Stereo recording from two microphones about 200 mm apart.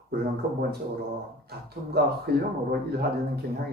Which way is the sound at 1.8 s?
40° right (ahead or behind).